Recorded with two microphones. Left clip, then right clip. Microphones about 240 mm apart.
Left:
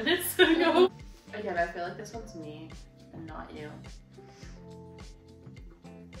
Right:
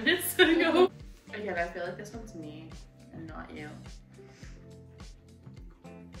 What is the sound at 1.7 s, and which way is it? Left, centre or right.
Speech, centre.